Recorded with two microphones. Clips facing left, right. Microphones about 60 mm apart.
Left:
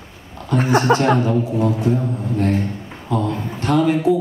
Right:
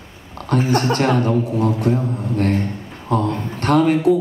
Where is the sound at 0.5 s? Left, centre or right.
Right.